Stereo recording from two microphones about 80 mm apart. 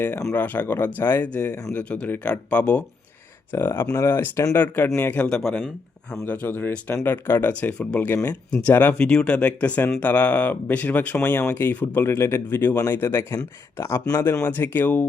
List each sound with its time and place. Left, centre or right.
0.0 s speech: left
3.5 s speech: left
5.2 s speech: centre
6.2 s speech: left